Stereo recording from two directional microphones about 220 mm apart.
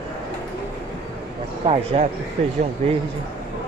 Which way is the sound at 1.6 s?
30° right (ahead or behind).